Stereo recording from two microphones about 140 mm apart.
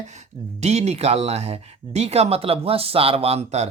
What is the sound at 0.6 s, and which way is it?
Speech, 50° right (ahead or behind).